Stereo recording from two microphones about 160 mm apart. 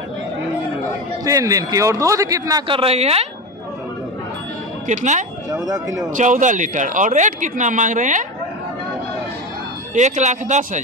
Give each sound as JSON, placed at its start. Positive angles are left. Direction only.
{"t": 1.2, "sound": "a man's voice", "side_deg": -20}
{"t": 2.7, "sound": "speech", "side_deg": -40}
{"t": 4.8, "sound": "speech", "side_deg": -50}
{"t": 5.5, "sound": "a man's voice", "side_deg": -20}
{"t": 6.1, "sound": "speech", "side_deg": -50}
{"t": 9.9, "sound": "speech", "side_deg": -45}